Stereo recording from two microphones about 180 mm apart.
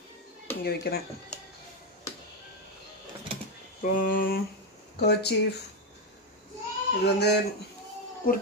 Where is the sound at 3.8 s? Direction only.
50° left (ahead or behind).